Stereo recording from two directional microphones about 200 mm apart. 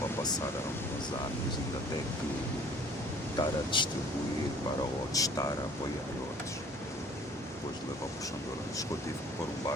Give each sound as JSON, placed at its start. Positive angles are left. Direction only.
{"t": 0.2, "sound": "a sound", "side_deg": 20}
{"t": 3.3, "sound": "speech", "side_deg": 25}
{"t": 5.1, "sound": "speech", "side_deg": 15}